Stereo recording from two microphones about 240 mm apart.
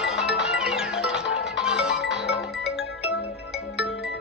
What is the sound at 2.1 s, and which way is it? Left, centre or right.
Music, left.